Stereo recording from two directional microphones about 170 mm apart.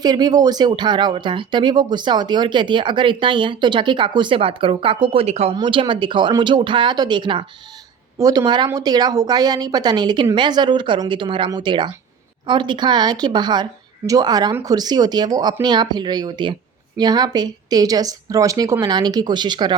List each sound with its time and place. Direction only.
0.0 s speech: 25° right (ahead or behind)
5.5 s speech: 25° right (ahead or behind)